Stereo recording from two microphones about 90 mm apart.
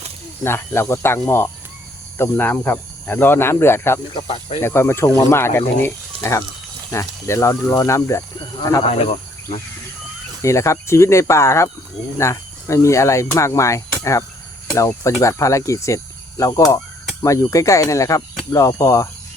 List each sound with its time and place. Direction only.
0.4 s speech: 30° left (ahead or behind)
4.1 s speech: 90° left
4.6 s speech: 30° left (ahead or behind)
8.4 s speech: 45° left (ahead or behind)
10.4 s speech: 35° left (ahead or behind)